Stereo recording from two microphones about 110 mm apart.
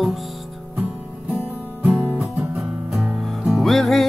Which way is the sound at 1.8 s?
15° right (ahead or behind).